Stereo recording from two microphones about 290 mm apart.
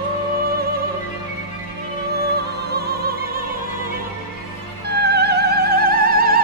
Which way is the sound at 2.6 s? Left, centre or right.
Right.